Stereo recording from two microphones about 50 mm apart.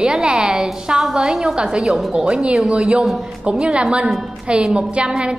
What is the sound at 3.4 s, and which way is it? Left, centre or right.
A woman's voice, centre.